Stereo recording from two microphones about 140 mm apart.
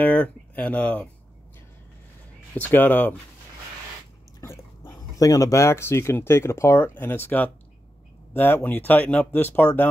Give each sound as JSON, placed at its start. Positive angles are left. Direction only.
{"t": 0.0, "sound": "speech", "side_deg": 10}
{"t": 2.5, "sound": "speech", "side_deg": 10}
{"t": 4.4, "sound": "speech", "side_deg": 20}